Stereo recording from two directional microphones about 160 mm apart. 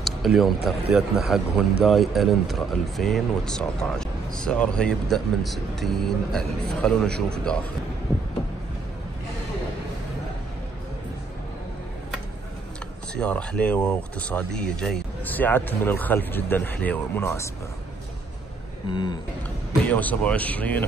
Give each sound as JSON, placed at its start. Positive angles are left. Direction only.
{"t": 0.0, "sound": "a man's voice", "side_deg": 0}
{"t": 13.1, "sound": "speech", "side_deg": 5}
{"t": 18.9, "sound": "a sound", "side_deg": 30}
{"t": 19.9, "sound": "speech", "side_deg": 10}